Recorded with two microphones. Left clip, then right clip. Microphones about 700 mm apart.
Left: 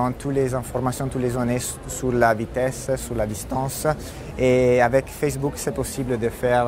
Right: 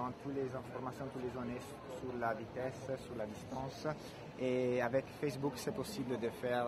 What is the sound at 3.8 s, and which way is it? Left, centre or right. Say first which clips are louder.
Speech: left 18 dB; left.